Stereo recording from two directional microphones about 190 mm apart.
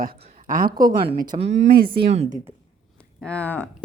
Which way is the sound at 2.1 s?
35° right (ahead or behind).